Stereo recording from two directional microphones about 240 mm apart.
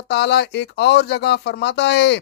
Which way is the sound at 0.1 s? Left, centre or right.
Left.